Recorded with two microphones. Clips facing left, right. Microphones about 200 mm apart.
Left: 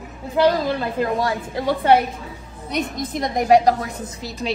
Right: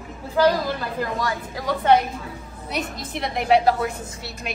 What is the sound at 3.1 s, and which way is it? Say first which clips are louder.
Speech: left 4 dB; 45° left (ahead or behind).